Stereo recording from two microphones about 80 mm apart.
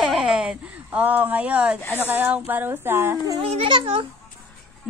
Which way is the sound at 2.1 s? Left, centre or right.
Right.